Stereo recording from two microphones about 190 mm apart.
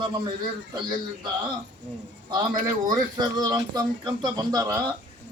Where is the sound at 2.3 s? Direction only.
20° right (ahead or behind).